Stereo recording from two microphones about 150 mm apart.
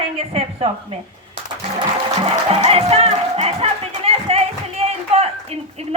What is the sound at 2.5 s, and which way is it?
Music, 40° right (ahead or behind).